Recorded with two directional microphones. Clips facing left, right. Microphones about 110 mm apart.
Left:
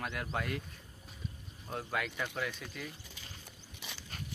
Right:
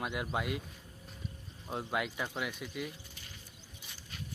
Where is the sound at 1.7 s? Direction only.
20° right (ahead or behind).